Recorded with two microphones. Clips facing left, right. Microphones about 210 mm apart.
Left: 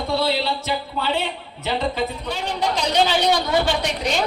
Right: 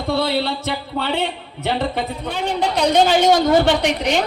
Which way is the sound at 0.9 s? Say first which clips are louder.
Right 2 dB; 65° right (ahead or behind).